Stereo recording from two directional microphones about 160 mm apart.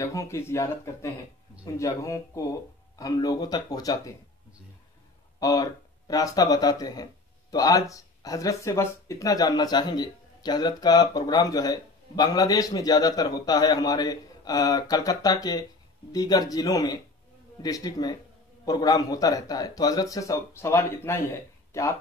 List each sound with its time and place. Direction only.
0.0 s speech: 20° left (ahead or behind)
5.4 s speech: 20° left (ahead or behind)